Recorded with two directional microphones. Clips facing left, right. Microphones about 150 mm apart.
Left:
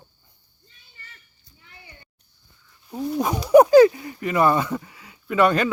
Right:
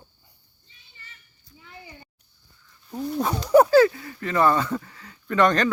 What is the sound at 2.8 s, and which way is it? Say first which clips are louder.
Speech: left 2 dB; 5° left (ahead or behind).